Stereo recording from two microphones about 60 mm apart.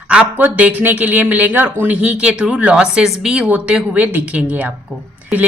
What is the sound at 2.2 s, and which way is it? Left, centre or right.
A woman's voice, centre.